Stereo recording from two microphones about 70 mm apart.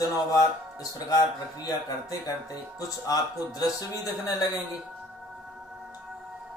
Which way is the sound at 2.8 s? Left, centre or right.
Left.